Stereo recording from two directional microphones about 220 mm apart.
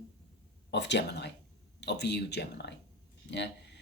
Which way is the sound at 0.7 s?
50° left (ahead or behind).